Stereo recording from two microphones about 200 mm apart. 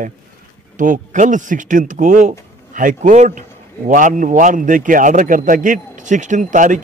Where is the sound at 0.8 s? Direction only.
40° right (ahead or behind).